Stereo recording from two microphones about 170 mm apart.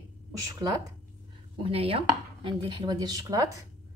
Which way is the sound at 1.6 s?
35° right (ahead or behind).